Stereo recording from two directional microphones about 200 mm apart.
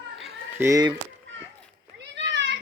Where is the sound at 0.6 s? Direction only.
20° right (ahead or behind).